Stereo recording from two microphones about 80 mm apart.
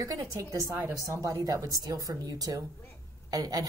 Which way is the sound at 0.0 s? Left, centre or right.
Right.